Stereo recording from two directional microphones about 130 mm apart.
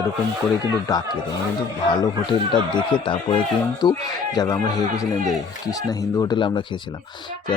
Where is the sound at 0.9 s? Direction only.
30° left (ahead or behind).